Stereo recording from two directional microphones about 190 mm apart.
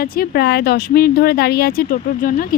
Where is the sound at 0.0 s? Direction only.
55° left (ahead or behind).